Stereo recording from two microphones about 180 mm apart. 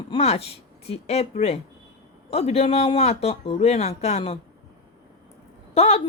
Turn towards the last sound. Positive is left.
turn(degrees=35)  # may be behind; listen again after turning